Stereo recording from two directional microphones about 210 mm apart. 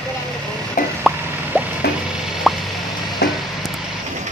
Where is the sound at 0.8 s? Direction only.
40° left (ahead or behind).